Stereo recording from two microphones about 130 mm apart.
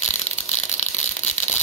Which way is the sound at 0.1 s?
65° left (ahead or behind).